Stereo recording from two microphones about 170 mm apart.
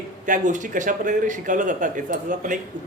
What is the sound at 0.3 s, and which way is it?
Speech, 45° right (ahead or behind).